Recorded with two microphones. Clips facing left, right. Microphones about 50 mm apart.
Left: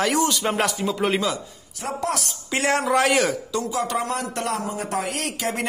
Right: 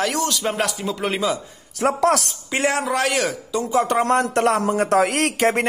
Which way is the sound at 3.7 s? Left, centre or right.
Right.